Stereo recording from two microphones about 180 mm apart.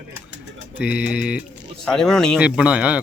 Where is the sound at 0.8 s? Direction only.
5° right (ahead or behind).